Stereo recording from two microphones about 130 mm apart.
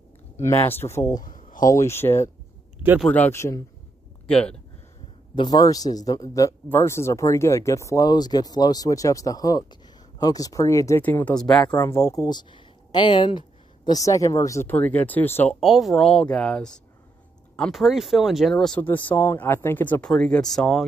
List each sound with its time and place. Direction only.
0.4 s a man's voice: 20° left (ahead or behind)
1.2 s a sound: 90° left
1.7 s a man's voice: 20° left (ahead or behind)
4.3 s speech: 5° left (ahead or behind)
5.3 s a man's voice: 35° left (ahead or behind)
11.1 s speech: 10° left (ahead or behind)
11.8 s a man's voice: 20° left (ahead or behind)
15.6 s speech: centre (ahead or behind)